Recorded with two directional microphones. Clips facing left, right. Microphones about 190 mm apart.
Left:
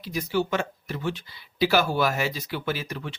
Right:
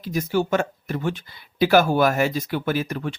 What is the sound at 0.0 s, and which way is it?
Speech, 50° right (ahead or behind).